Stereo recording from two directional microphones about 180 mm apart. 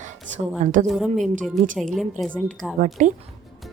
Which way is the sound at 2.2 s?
Centre (ahead or behind).